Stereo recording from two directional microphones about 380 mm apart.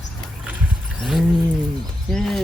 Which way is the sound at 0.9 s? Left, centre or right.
Centre.